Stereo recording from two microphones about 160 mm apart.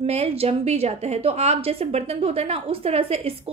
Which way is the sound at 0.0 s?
40° right (ahead or behind).